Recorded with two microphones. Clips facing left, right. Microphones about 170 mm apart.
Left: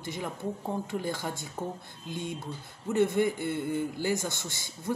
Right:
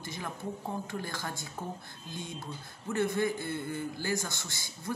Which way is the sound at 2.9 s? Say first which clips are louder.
Left 4 dB; 20° left (ahead or behind).